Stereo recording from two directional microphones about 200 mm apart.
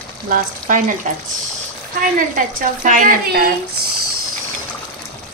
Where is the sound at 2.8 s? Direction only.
40° right (ahead or behind).